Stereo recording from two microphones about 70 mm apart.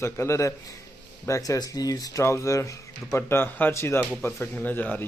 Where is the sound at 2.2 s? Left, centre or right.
Left.